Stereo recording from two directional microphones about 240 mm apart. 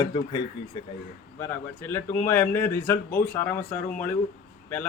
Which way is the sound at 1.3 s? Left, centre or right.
Centre.